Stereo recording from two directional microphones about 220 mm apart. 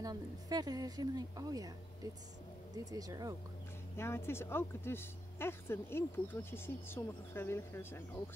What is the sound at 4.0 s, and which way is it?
Speech, 10° left (ahead or behind).